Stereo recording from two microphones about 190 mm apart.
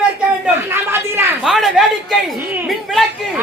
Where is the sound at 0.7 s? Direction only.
10° right (ahead or behind).